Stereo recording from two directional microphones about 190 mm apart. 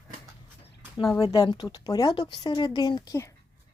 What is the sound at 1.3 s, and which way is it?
Speech, 20° left (ahead or behind).